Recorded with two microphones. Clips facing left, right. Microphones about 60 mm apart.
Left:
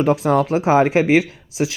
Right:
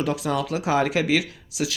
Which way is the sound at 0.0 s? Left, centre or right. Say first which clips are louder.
Left 8 dB; left.